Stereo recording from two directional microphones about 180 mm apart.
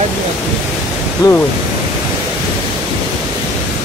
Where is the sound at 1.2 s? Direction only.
20° left (ahead or behind).